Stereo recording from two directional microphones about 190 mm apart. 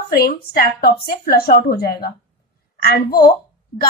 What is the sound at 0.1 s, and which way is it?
A woman's voice, 55° left (ahead or behind).